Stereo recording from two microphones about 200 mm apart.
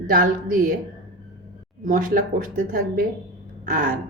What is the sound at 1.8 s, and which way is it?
A woman's voice, 45° right (ahead or behind).